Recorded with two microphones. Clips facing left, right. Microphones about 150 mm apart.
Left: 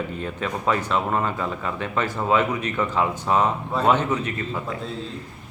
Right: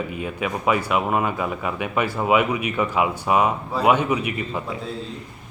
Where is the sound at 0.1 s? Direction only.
10° right (ahead or behind).